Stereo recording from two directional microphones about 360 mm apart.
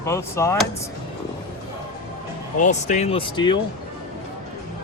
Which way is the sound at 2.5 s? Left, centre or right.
Centre.